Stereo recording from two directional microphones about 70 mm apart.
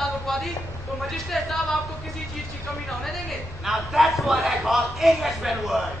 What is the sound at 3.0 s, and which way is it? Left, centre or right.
A man's voice, centre.